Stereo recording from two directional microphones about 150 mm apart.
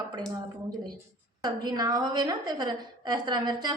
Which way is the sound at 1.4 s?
30° right (ahead or behind).